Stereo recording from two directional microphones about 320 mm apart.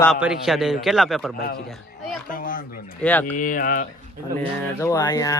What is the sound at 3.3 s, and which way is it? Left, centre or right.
Speech, left.